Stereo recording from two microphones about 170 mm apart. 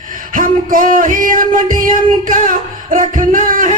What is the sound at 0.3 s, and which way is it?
Music, 50° right (ahead or behind).